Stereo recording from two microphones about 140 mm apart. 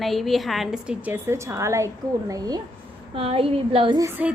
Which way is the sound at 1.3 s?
20° right (ahead or behind).